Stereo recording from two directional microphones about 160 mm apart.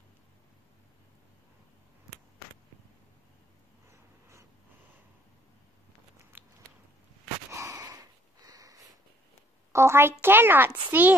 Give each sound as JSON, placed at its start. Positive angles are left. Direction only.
{"t": 6.3, "sound": "biting", "side_deg": -10}
{"t": 7.5, "sound": "wheeze", "side_deg": -20}
{"t": 9.7, "sound": "a woman's voice", "side_deg": -15}